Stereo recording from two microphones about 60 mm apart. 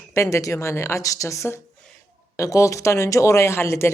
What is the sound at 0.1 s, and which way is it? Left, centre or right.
Speech, left.